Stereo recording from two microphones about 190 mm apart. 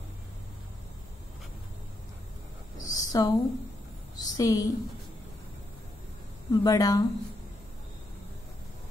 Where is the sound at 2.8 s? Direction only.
20° left (ahead or behind).